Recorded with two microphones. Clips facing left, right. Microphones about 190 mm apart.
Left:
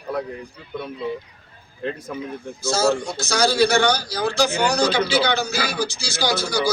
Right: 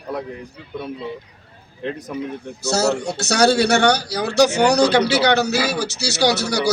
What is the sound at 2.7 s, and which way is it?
A man's voice, 70° right (ahead or behind).